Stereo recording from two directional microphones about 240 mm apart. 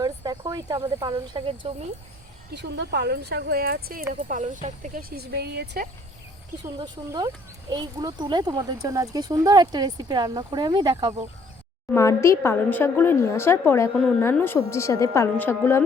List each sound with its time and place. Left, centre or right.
0.0 s speech: centre
2.5 s speech: right
6.7 s speech: centre
11.9 s speech: centre